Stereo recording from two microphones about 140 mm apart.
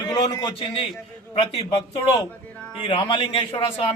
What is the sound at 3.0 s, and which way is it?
Speech, 35° left (ahead or behind).